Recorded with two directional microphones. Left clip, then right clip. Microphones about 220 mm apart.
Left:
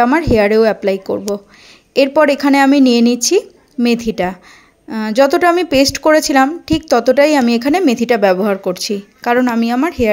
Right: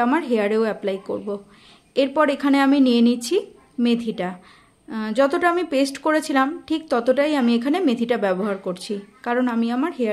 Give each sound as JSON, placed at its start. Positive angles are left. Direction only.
{"t": 0.0, "sound": "a woman's voice", "side_deg": 30}